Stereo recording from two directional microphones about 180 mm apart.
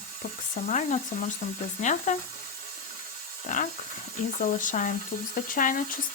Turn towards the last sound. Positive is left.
turn(degrees=50)  # may be behind; listen again after turning